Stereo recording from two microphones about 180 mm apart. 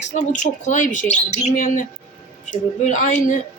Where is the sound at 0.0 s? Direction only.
40° left (ahead or behind).